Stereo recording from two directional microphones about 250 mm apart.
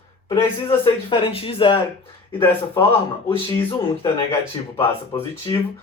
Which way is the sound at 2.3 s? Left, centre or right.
Centre.